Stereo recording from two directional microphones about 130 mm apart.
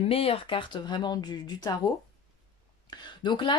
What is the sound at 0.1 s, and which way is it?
Speech, 45° left (ahead or behind).